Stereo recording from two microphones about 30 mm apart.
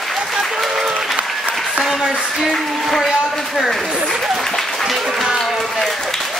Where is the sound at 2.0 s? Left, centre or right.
Right.